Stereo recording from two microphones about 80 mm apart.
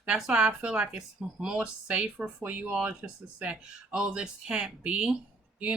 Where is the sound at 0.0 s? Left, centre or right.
Centre.